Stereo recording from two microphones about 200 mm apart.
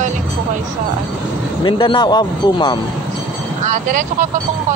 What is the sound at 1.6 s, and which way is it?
Speech, 25° left (ahead or behind).